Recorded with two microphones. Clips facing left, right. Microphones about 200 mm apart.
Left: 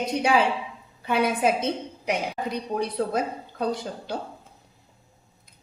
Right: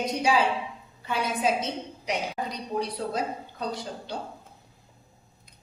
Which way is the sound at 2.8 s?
55° left (ahead or behind).